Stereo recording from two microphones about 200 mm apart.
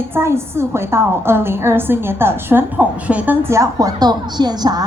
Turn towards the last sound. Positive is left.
turn(degrees=-20)  # may be behind; listen again after turning